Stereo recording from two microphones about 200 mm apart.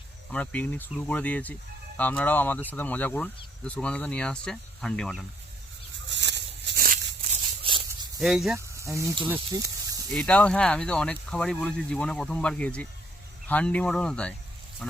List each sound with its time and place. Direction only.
0.3 s speech: 5° left (ahead or behind)
6.1 s a sound: 60° right (ahead or behind)
8.2 s speech: centre (ahead or behind)
8.5 s speech: 15° right (ahead or behind)
9.5 s snake: 15° right (ahead or behind)
10.2 s speech: 5° left (ahead or behind)
14.8 s duck: centre (ahead or behind)